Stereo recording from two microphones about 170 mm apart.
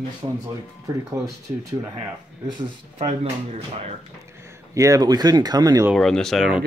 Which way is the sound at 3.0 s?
40° right (ahead or behind).